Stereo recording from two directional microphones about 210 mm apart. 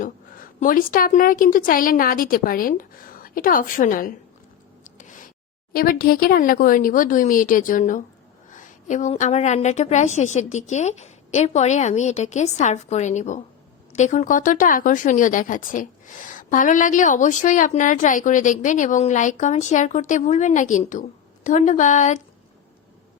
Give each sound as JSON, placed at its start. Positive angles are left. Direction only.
{"t": 0.0, "sound": "a woman's voice", "side_deg": 40}
{"t": 4.8, "sound": "a sound", "side_deg": 40}
{"t": 5.7, "sound": "a woman's voice", "side_deg": 45}